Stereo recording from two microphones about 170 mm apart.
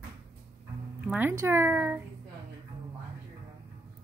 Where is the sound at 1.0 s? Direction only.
10° right (ahead or behind).